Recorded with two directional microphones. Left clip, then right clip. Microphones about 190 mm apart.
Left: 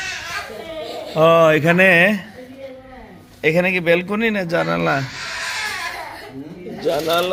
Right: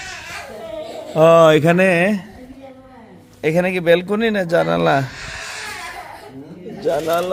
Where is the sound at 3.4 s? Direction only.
30° right (ahead or behind).